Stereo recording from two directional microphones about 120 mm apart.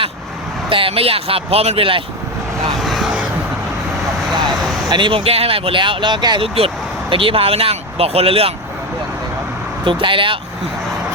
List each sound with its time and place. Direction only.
0.7 s speech: 50° right (ahead or behind)
2.7 s vehicle: centre (ahead or behind)
4.9 s speech: 40° right (ahead or behind)
9.8 s speech: 45° right (ahead or behind)